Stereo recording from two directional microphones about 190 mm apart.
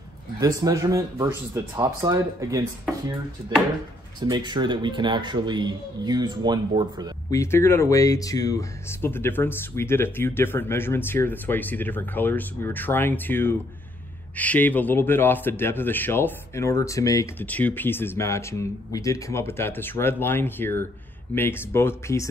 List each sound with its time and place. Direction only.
0.4 s speech: 20° right (ahead or behind)
4.2 s a man's voice: 25° right (ahead or behind)
7.2 s speech: 15° left (ahead or behind)